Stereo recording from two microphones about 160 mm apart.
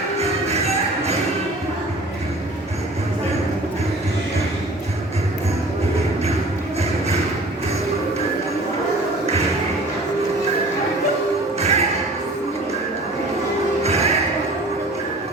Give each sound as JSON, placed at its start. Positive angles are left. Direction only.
{"t": 0.2, "sound": "music", "side_deg": -40}
{"t": 11.6, "sound": "music", "side_deg": -40}
{"t": 13.8, "sound": "music", "side_deg": -40}